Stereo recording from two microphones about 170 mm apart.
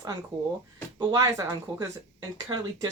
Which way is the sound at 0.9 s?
20° right (ahead or behind).